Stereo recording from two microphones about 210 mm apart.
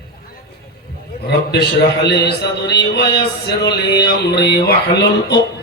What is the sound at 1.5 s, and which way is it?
A man's voice, 50° left (ahead or behind).